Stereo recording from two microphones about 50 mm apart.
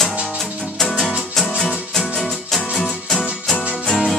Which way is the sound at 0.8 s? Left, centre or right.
Centre.